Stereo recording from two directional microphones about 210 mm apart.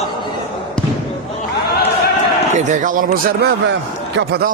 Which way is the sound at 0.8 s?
5° left (ahead or behind).